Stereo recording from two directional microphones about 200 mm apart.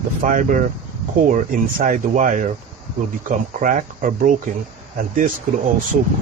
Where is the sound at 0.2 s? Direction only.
40° right (ahead or behind).